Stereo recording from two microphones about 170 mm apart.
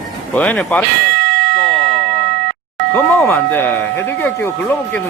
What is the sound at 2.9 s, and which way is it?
Speech, 10° left (ahead or behind).